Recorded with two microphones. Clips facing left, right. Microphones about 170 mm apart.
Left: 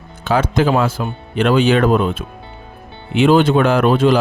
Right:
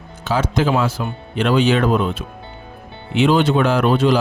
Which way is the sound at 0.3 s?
55° left (ahead or behind).